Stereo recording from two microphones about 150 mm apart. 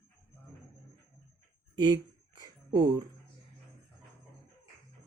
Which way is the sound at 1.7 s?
30° right (ahead or behind).